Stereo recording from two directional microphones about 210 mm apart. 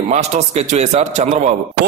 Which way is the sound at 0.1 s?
30° right (ahead or behind).